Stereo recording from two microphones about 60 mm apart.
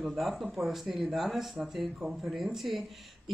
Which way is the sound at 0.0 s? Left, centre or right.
Centre.